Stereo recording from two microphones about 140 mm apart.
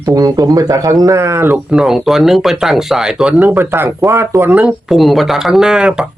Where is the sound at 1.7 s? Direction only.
5° right (ahead or behind).